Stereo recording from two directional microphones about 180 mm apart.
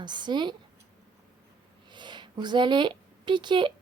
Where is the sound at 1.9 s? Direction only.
25° right (ahead or behind).